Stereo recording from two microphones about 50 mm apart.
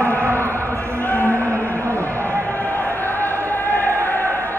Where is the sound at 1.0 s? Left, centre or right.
Left.